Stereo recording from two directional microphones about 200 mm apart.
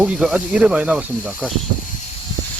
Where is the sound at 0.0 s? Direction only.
5° right (ahead or behind).